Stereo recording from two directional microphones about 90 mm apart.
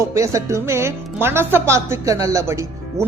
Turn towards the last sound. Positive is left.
turn(degrees=-30)  # may be behind; listen again after turning